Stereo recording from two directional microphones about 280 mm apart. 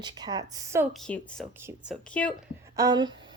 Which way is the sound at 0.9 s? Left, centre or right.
Centre.